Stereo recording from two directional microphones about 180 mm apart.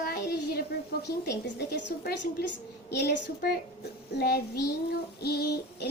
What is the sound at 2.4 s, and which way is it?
A woman's voice, 60° left (ahead or behind).